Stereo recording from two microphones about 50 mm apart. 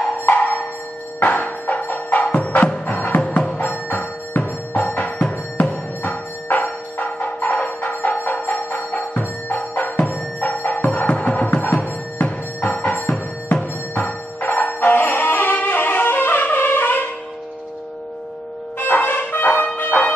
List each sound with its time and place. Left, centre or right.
0.2 s music: left
18.8 s music: left